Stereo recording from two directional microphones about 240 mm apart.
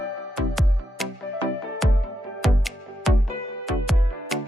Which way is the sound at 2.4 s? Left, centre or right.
Centre.